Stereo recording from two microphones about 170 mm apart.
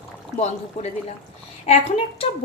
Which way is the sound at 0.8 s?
40° left (ahead or behind).